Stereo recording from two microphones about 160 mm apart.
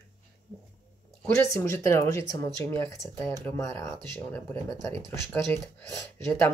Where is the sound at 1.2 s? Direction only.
15° left (ahead or behind).